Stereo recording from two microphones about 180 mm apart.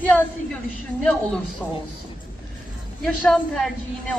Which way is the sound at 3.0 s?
Centre (ahead or behind).